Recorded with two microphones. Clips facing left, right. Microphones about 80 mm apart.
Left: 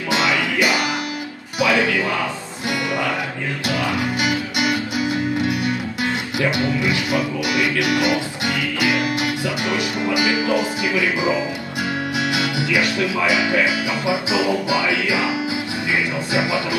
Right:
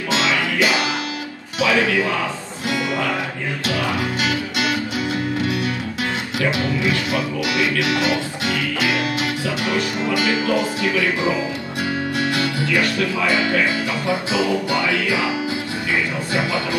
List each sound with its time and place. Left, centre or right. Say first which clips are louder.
0.1 s music: left 1 dB; centre
1.6 s speech: even; centre
3.6 s music: left 1 dB; centre
6.6 s speech: even; centre
7.9 s music: left 1 dB; centre
12.6 s speech: even; centre